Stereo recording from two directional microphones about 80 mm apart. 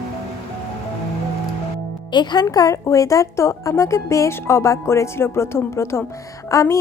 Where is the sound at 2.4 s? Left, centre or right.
Left.